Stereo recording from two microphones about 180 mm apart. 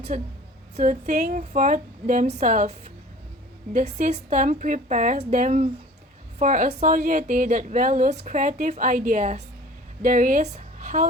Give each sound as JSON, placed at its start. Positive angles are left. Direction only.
{"t": 0.1, "sound": "a woman's voice", "side_deg": -45}